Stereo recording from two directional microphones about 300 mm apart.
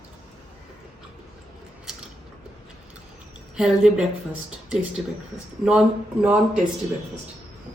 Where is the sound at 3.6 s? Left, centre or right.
Centre.